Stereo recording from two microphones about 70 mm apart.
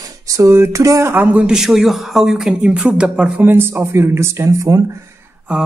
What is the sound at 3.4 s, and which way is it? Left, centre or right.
Speech, right.